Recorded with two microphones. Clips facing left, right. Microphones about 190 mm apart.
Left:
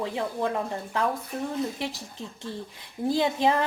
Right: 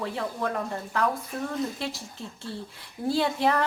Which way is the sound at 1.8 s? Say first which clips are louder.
Left 1 dB; 15° left (ahead or behind).